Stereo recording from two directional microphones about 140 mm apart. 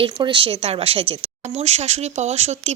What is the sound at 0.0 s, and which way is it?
Speech, 35° right (ahead or behind).